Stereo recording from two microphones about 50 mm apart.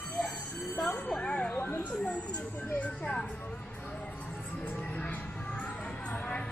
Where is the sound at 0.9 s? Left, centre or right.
Left.